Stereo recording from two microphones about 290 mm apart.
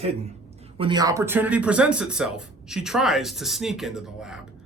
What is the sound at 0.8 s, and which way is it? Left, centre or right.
Speech, centre.